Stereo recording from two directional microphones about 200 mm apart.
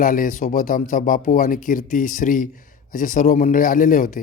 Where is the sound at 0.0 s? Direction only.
45° left (ahead or behind).